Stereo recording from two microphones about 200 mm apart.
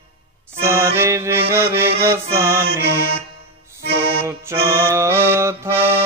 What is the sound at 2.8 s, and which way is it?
Music, 55° right (ahead or behind).